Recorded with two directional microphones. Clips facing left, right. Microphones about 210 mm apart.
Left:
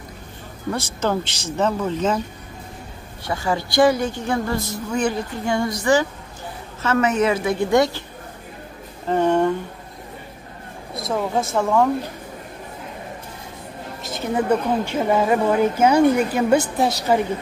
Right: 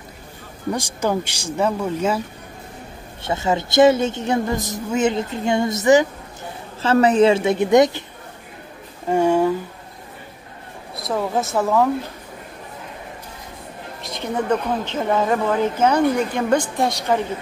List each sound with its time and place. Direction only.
0.7 s speech: 15° right (ahead or behind)
3.3 s a woman's voice: 20° right (ahead or behind)
6.8 s a woman's voice: 30° right (ahead or behind)
9.1 s speech: 10° right (ahead or behind)
11.0 s speech: centre (ahead or behind)
14.0 s a woman's voice: 5° left (ahead or behind)